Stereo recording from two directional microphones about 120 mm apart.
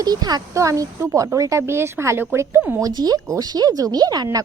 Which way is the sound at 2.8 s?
35° right (ahead or behind).